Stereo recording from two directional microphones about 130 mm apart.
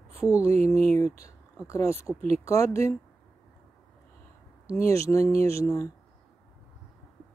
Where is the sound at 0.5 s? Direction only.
55° right (ahead or behind).